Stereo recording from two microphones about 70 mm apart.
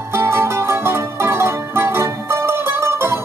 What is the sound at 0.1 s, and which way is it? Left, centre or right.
Music, right.